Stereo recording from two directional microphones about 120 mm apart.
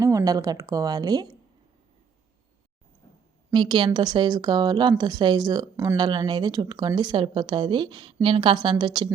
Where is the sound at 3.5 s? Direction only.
40° right (ahead or behind).